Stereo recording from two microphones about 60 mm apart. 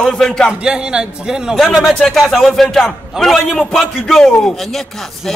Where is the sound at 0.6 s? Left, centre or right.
Centre.